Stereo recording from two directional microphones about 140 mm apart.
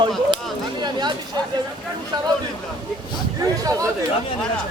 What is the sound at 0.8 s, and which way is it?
Speech, 30° right (ahead or behind).